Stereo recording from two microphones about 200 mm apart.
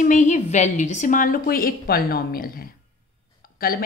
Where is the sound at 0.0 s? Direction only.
40° left (ahead or behind).